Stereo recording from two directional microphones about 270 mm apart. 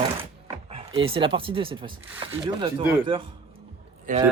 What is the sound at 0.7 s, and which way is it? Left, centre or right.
Speech, right.